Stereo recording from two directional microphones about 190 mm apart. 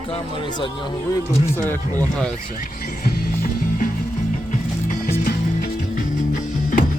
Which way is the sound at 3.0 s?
45° left (ahead or behind).